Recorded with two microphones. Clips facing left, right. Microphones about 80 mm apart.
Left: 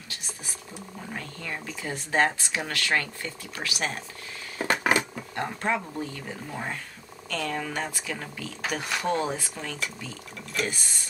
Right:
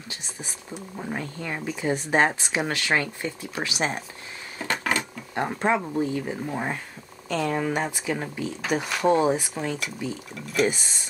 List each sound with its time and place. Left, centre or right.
0.1 s speech: right
4.6 s a sound: centre
5.3 s speech: centre
10.3 s speech: centre
10.7 s speech: right